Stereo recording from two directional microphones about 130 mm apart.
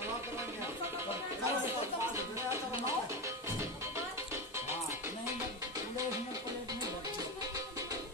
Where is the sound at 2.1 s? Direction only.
20° right (ahead or behind).